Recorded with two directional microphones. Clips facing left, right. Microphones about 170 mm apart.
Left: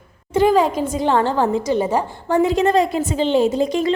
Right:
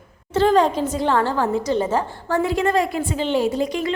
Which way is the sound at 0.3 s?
10° left (ahead or behind).